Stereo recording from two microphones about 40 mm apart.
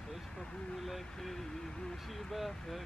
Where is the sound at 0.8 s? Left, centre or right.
Centre.